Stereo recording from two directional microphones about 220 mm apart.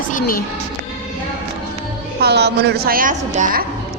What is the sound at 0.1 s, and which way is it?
Speech, 40° left (ahead or behind).